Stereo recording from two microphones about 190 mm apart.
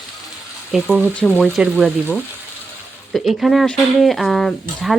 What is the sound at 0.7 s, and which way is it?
Speech, 5° right (ahead or behind).